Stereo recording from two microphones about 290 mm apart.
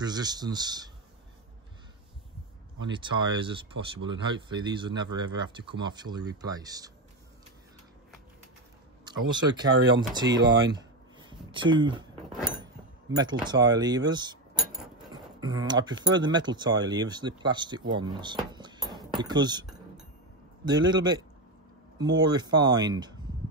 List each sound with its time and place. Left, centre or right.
0.0 s speech: centre
2.9 s speech: centre
9.0 s speech: centre
12.3 s a sound: centre
13.1 s speech: centre
14.6 s a sound: centre
15.0 s speech: centre
20.6 s speech: centre